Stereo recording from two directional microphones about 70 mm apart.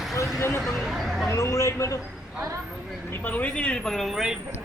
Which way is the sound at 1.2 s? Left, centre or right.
Left.